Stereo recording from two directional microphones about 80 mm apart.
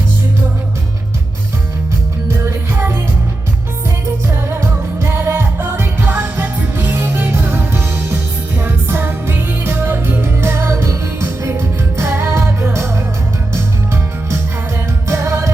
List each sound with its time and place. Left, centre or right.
2.2 s music: right
4.0 s music: right